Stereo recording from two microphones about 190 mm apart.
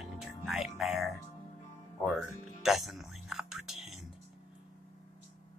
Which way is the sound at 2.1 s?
Centre (ahead or behind).